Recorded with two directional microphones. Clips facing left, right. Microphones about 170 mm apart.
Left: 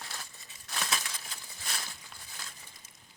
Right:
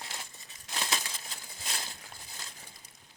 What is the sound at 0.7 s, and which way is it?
Crumpling, 25° right (ahead or behind).